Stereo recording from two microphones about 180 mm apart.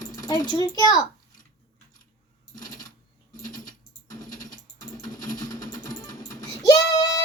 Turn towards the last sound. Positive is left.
turn(degrees=20)  # may be behind; listen again after turning